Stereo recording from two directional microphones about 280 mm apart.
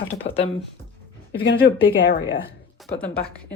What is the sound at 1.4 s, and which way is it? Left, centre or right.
Speech, left.